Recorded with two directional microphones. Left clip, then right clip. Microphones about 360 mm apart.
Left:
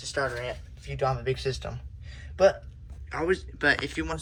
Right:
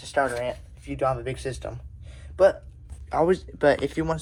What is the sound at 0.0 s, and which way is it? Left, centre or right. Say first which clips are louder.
Speech: right 5 dB; centre.